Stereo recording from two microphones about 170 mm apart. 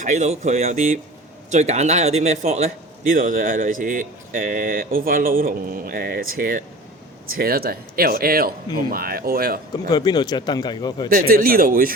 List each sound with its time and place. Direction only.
0.0 s a man's voice: 45° right (ahead or behind); by 9.6 s 60° right (ahead or behind)
9.9 s speech: 25° left (ahead or behind)
11.1 s a man's voice: 55° right (ahead or behind)